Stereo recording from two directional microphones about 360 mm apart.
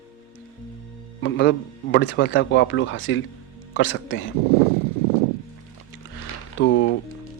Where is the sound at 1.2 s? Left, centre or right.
Left.